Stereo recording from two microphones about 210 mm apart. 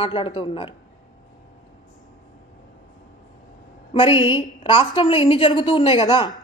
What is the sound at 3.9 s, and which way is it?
A woman's voice, 25° left (ahead or behind).